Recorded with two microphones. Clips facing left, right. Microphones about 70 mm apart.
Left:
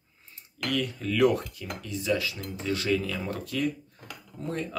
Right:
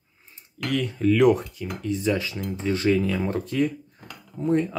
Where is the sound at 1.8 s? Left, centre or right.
Right.